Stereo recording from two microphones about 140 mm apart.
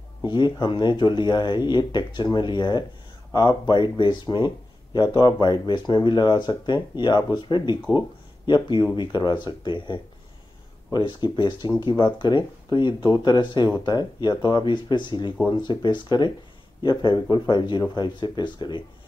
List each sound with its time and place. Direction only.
0.2 s speech: 35° left (ahead or behind)
8.9 s speech: 30° left (ahead or behind)